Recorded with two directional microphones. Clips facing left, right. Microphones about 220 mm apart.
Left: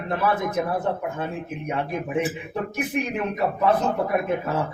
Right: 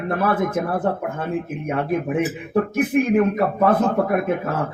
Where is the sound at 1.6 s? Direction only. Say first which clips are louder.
Right 4 dB; 50° right (ahead or behind).